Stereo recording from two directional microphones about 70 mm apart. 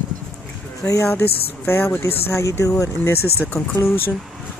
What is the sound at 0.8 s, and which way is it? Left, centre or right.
Speech, left.